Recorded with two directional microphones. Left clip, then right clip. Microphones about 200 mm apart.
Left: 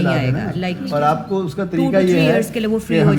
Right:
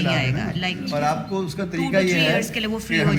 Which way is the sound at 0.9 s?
55° left (ahead or behind).